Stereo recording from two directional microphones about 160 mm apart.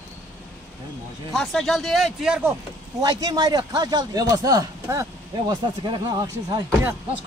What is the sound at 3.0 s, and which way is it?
Speech, 25° right (ahead or behind).